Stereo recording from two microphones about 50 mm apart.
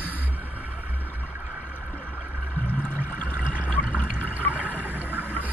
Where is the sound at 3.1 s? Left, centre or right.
Left.